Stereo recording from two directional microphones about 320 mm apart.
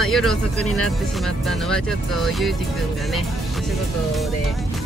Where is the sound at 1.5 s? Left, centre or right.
Centre.